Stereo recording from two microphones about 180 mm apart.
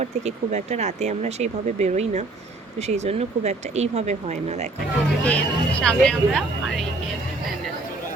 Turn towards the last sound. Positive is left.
turn(degrees=0)  # may be behind; listen again after turning